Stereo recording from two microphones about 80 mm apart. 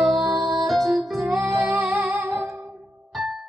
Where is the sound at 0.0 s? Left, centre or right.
Centre.